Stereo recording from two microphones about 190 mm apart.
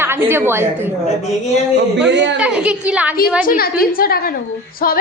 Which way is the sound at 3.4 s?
50° left (ahead or behind).